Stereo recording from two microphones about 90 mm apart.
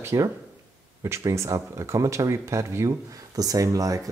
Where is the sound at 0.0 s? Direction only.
35° right (ahead or behind).